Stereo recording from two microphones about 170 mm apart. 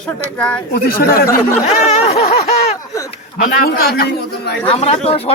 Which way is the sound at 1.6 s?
40° left (ahead or behind).